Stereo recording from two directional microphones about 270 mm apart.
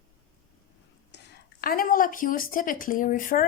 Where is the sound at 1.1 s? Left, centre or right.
Left.